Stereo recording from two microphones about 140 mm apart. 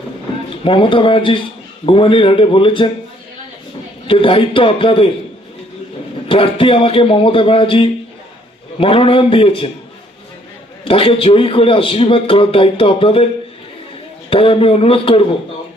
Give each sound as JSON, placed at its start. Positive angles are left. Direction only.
{"t": 0.5, "sound": "a man's voice", "side_deg": 40}
{"t": 4.0, "sound": "a man's voice", "side_deg": 40}
{"t": 6.2, "sound": "a man's voice", "side_deg": 40}
{"t": 10.8, "sound": "a man's voice", "side_deg": 40}
{"t": 14.3, "sound": "a man's voice", "side_deg": 40}